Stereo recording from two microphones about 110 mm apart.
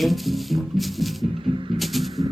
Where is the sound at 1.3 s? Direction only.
50° right (ahead or behind).